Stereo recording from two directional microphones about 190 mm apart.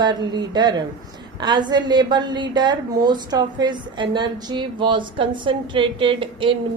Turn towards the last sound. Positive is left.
turn(degrees=-25)  # may be behind; listen again after turning